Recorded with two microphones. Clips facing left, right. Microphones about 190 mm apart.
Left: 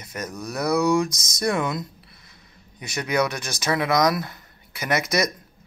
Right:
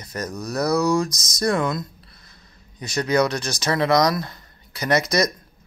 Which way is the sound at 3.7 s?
10° left (ahead or behind).